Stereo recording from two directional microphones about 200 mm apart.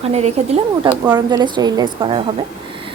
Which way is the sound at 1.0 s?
20° right (ahead or behind).